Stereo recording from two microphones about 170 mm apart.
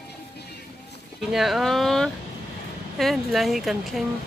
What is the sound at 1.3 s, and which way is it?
Speech, centre (ahead or behind).